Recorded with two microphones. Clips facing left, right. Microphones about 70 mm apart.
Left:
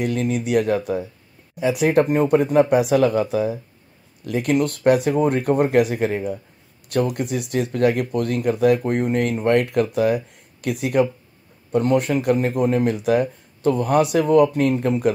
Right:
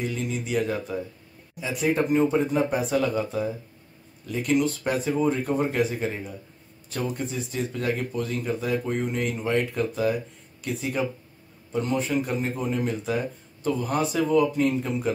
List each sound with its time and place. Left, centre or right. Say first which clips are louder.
0.0 s speech: left 7 dB; left
11.7 s speech: left 7 dB; left